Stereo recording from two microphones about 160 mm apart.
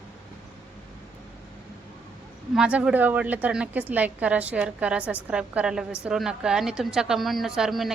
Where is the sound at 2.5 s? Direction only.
5° right (ahead or behind).